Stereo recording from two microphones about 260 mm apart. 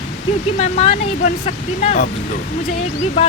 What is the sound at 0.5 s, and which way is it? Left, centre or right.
Speech, left.